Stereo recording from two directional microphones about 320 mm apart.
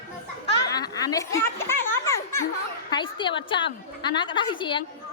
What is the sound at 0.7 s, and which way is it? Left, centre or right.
A woman's voice, centre.